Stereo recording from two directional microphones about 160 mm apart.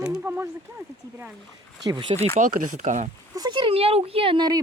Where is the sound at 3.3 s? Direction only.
25° right (ahead or behind).